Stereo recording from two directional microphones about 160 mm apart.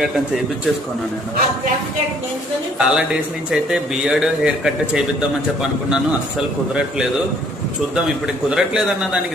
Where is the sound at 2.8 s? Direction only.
5° right (ahead or behind).